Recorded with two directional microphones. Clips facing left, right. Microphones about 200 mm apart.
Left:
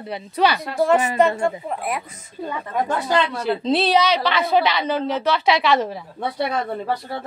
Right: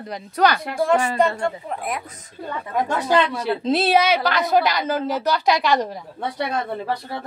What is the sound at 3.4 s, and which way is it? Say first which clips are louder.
A woman's voice: left 1 dB; 5° right (ahead or behind).